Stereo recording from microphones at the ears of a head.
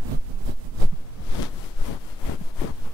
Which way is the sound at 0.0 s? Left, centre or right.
Right.